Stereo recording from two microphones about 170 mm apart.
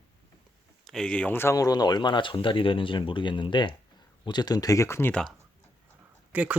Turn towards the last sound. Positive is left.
turn(degrees=-10)  # may be behind; listen again after turning